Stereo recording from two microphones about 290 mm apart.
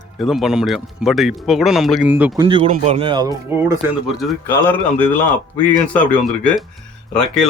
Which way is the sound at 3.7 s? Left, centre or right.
Centre.